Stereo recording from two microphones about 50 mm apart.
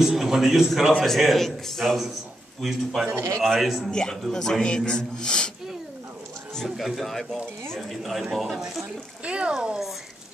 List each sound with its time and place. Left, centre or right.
0.0 s a man's voice: centre
3.1 s a man's voice: right
3.3 s a man's voice: centre
3.9 s a man's voice: centre
6.8 s a man's voice: centre
8.8 s speech: right